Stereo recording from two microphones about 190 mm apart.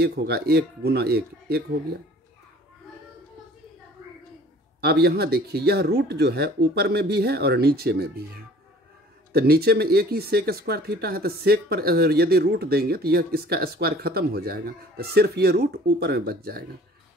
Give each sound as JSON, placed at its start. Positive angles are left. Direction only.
{"t": 0.0, "sound": "speech", "side_deg": -60}
{"t": 4.8, "sound": "speech", "side_deg": -55}
{"t": 9.3, "sound": "speech", "side_deg": -55}